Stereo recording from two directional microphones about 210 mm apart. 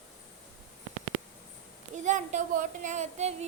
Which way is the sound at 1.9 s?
35° right (ahead or behind).